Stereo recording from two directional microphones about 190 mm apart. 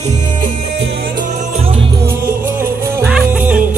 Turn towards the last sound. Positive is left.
turn(degrees=-5)  # may be behind; listen again after turning